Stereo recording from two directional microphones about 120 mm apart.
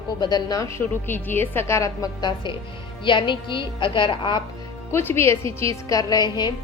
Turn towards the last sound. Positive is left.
turn(degrees=35)  # may be behind; listen again after turning